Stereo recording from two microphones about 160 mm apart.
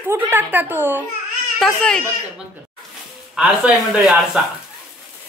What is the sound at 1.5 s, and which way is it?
Speech, 5° left (ahead or behind).